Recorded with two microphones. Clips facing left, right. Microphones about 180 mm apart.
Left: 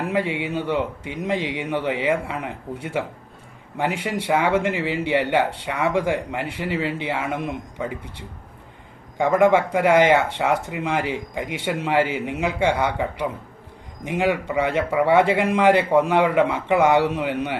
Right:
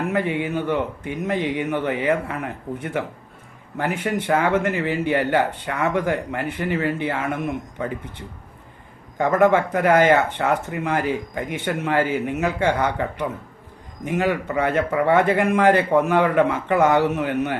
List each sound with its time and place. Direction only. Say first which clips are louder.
0.1 s speech: right 1 dB; 10° left (ahead or behind)
9.1 s speech: even; 10° left (ahead or behind)